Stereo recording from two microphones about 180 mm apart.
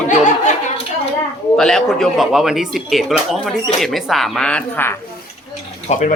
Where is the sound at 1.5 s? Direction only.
Centre (ahead or behind).